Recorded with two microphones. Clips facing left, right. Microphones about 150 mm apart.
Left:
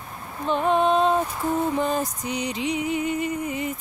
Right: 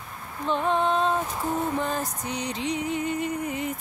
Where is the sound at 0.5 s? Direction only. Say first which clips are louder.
Left 4 dB; 15° left (ahead or behind).